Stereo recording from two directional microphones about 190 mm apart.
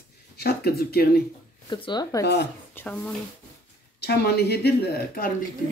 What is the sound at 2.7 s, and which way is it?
Speech, 10° left (ahead or behind).